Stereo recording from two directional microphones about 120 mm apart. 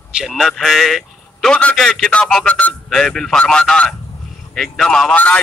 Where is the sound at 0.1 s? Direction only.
5° right (ahead or behind).